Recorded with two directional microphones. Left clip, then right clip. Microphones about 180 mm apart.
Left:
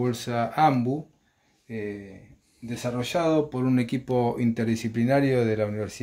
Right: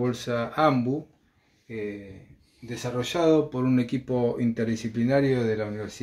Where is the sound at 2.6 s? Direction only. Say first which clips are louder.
Even; 45° left (ahead or behind).